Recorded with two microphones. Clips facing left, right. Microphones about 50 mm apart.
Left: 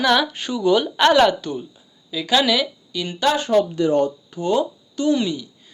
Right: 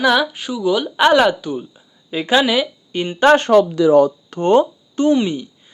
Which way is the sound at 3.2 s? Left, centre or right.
Right.